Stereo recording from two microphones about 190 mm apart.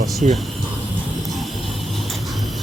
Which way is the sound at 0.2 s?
40° right (ahead or behind).